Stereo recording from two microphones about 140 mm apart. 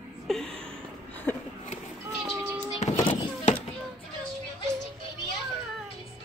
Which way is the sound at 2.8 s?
55° left (ahead or behind).